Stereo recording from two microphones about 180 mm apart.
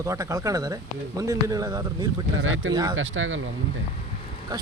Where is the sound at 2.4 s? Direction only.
90° right.